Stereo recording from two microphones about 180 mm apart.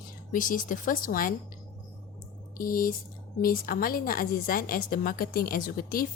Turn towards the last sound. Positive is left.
turn(degrees=50)  # may be behind; listen again after turning